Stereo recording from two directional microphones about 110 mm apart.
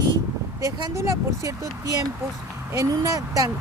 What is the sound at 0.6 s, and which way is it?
Speech, 30° right (ahead or behind).